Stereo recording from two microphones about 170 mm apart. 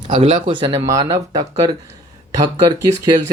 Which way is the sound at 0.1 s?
30° right (ahead or behind).